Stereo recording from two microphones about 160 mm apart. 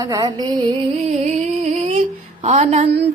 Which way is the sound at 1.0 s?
45° right (ahead or behind).